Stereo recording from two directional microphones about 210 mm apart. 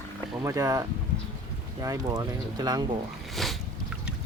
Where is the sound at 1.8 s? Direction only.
15° right (ahead or behind).